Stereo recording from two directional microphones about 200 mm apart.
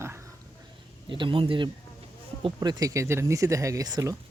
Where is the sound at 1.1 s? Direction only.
25° right (ahead or behind).